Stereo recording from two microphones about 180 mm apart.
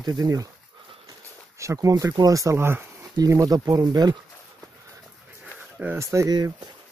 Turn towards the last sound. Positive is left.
turn(degrees=-20)  # may be behind; listen again after turning